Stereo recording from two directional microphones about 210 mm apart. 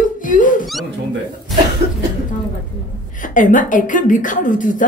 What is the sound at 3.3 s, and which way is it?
A woman's voice, 40° left (ahead or behind).